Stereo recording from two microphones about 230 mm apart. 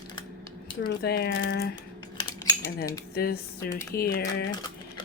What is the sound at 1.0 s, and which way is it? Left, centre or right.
Speech, left.